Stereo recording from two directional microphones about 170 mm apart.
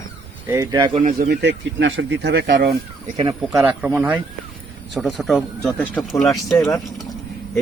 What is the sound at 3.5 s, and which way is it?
Speech, 10° right (ahead or behind).